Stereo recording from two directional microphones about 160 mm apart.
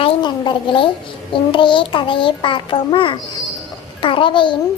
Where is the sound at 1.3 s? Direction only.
30° left (ahead or behind).